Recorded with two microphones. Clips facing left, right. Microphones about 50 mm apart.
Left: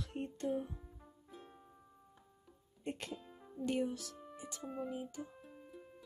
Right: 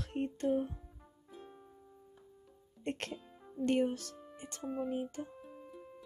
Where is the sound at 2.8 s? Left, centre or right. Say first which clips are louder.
Right 4 dB; right.